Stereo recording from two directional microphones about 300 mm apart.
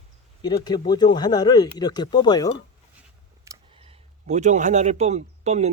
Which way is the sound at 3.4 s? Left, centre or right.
Centre.